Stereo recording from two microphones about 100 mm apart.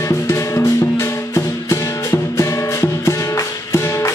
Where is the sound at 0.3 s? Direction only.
30° left (ahead or behind).